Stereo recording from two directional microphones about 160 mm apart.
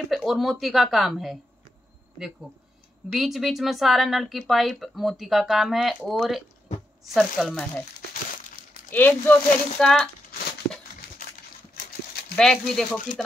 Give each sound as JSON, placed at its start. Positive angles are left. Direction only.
{"t": 0.1, "sound": "speech", "side_deg": 0}
{"t": 3.1, "sound": "speech", "side_deg": 0}
{"t": 8.9, "sound": "speech", "side_deg": 10}
{"t": 11.0, "sound": "a sound", "side_deg": 70}
{"t": 11.7, "sound": "horse", "side_deg": 70}
{"t": 12.4, "sound": "speech", "side_deg": 5}